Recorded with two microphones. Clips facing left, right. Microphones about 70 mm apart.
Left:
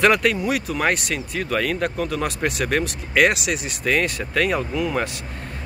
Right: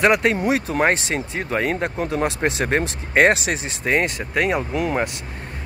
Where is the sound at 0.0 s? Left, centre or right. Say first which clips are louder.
Right 1 dB; right.